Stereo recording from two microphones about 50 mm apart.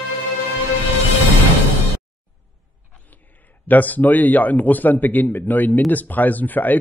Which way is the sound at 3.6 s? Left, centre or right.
Left.